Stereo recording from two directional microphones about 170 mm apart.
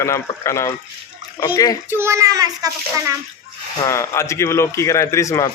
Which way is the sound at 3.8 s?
15° left (ahead or behind).